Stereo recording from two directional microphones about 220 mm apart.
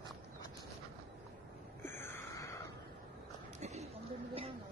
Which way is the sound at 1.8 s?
10° left (ahead or behind).